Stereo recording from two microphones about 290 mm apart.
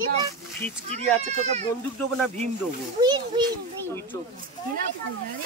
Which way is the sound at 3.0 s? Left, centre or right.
Centre.